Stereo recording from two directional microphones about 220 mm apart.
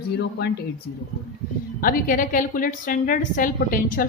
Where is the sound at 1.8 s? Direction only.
40° left (ahead or behind).